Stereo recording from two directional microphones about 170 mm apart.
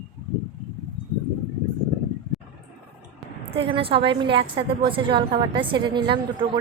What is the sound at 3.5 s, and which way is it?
A woman's voice, 35° right (ahead or behind).